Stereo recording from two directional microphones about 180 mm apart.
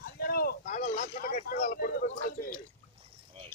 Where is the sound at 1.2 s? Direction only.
50° left (ahead or behind).